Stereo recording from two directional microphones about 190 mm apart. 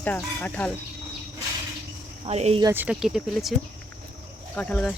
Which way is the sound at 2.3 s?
35° right (ahead or behind).